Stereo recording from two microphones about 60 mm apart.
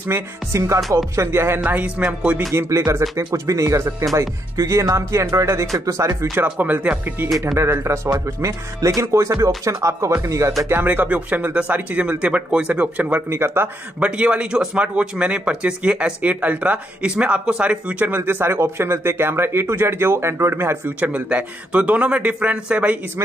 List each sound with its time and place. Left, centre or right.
0.1 s speech: right
1.6 s speech: right
2.7 s speech: right
4.1 s speech: right
6.6 s speech: right
7.2 s speech: centre
7.5 s speech: right
10.7 s speech: right
13.3 s speech: right
13.9 s speech: right
18.0 s speech: right
21.0 s speech: right